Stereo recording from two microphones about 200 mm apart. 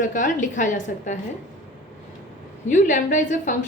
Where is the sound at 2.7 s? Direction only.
40° left (ahead or behind).